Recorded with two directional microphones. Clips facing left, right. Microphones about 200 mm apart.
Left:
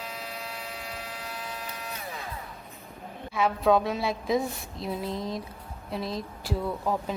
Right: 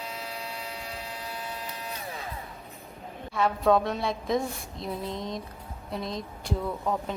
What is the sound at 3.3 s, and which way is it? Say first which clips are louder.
A woman's voice: even; centre (ahead or behind).